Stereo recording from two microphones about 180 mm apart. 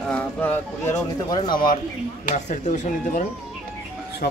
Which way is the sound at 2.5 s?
45° left (ahead or behind).